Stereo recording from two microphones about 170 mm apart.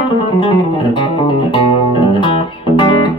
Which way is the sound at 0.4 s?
30° left (ahead or behind).